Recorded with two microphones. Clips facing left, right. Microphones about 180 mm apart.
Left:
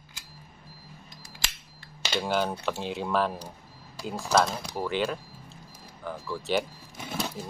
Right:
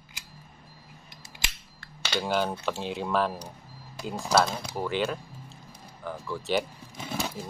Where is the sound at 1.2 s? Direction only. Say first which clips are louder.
Even; 20° right (ahead or behind).